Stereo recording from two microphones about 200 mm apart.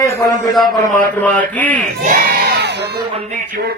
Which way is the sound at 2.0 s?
45° right (ahead or behind).